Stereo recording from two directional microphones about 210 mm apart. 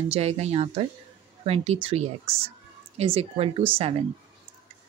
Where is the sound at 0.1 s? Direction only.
30° right (ahead or behind).